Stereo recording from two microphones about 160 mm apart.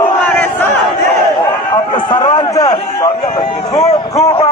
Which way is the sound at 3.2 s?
35° left (ahead or behind).